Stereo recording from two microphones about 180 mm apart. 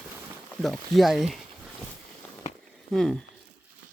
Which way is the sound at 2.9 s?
Centre (ahead or behind).